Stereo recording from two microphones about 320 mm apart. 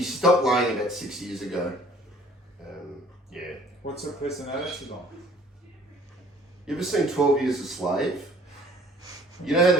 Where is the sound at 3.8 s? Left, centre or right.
Left.